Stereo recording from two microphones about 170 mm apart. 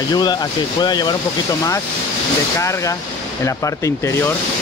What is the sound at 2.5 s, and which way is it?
Speech, 20° left (ahead or behind).